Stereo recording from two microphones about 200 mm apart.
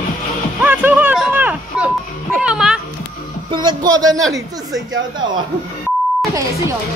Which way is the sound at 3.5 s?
20° right (ahead or behind).